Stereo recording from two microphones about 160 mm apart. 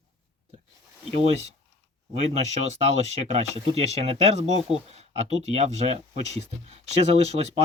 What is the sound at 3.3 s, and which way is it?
Speech, 40° right (ahead or behind).